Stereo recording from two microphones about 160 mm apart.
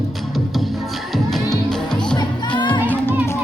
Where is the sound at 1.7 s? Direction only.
5° left (ahead or behind).